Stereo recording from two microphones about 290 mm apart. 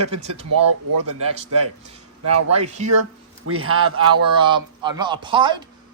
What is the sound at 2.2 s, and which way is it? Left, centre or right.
A man's voice, right.